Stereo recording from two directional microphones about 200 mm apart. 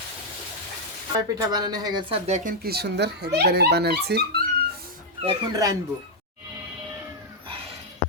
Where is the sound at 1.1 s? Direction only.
20° right (ahead or behind); by 4.2 s 55° right (ahead or behind).